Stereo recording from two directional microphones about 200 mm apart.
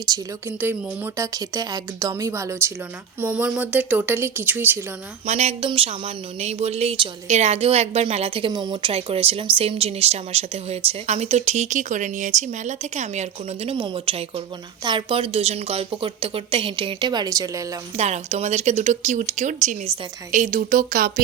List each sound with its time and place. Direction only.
0.0 s speech: 15° right (ahead or behind)
5.2 s a woman's voice: 35° right (ahead or behind); by 17.7 s 15° right (ahead or behind)
17.9 s speech: 35° right (ahead or behind)